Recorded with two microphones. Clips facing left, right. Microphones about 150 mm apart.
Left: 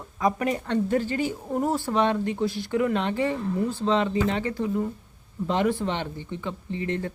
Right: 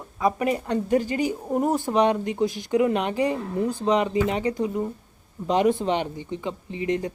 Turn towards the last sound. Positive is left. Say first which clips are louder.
# right 3 dB
turn(degrees=-15)  # may be behind; listen again after turning